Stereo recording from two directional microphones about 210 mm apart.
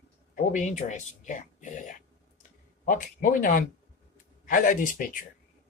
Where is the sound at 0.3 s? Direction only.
35° left (ahead or behind).